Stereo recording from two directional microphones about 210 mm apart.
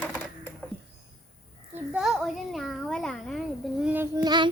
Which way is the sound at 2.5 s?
Centre (ahead or behind).